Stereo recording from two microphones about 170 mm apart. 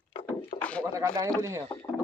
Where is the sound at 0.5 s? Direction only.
40° left (ahead or behind).